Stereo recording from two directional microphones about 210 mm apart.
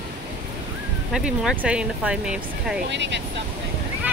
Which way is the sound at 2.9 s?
60° right (ahead or behind).